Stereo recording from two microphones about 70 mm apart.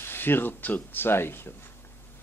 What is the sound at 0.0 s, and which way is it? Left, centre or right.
A man's voice, left.